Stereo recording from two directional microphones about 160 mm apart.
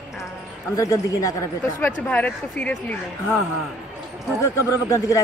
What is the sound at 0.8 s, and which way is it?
Speech, 20° left (ahead or behind).